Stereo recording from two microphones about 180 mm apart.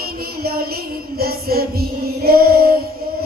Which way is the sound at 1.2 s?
60° right (ahead or behind).